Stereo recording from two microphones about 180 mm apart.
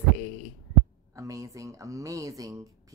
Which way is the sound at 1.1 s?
15° right (ahead or behind).